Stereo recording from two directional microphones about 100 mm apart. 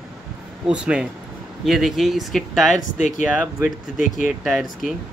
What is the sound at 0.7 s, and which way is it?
Speech, 10° right (ahead or behind).